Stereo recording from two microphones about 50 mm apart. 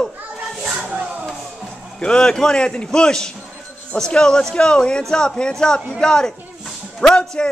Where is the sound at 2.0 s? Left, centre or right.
Centre.